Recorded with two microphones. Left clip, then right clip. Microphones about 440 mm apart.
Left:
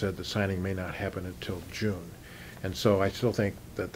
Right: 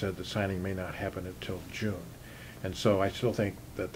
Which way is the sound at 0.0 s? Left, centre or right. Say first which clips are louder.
Left 2 dB; left.